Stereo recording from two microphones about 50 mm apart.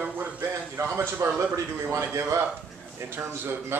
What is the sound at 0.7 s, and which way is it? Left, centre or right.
Speech, right.